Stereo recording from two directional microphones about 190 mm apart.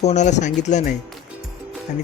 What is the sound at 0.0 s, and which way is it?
Speech, 35° left (ahead or behind).